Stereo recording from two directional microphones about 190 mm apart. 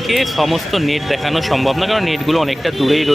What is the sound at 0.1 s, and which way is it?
Speech, centre (ahead or behind).